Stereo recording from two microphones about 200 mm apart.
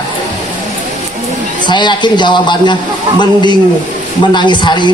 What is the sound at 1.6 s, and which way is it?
A man's voice, 20° left (ahead or behind).